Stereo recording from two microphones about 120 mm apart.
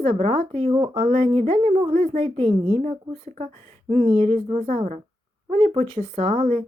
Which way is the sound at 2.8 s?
80° right.